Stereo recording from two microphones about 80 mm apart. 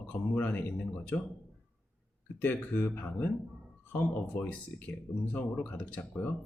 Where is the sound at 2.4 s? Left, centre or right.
Left.